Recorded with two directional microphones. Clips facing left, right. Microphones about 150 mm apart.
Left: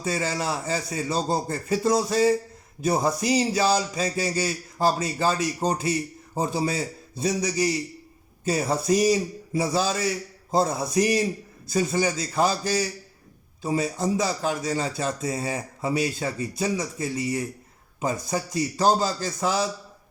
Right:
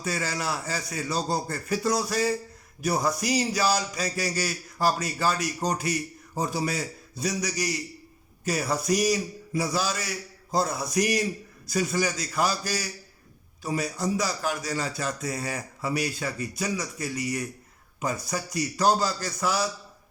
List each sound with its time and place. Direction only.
0.0 s a man's voice: 25° left (ahead or behind)